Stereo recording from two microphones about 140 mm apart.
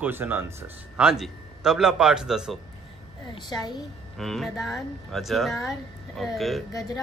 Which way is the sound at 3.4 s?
30° left (ahead or behind).